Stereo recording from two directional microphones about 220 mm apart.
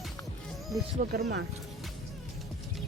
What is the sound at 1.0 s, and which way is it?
Speech, 35° right (ahead or behind).